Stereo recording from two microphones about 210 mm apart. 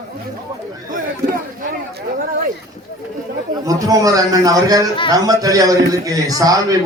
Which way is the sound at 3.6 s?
15° right (ahead or behind).